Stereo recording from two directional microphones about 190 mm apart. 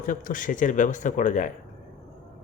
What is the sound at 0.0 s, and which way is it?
A man's voice, 45° left (ahead or behind).